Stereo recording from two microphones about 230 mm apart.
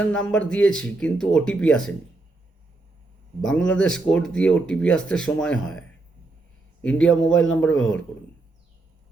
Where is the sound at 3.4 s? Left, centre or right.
Centre.